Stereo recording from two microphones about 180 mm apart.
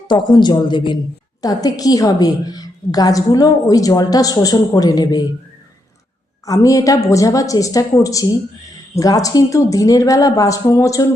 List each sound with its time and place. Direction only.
0.1 s a woman's voice: 25° left (ahead or behind)
6.4 s a woman's voice: 20° left (ahead or behind)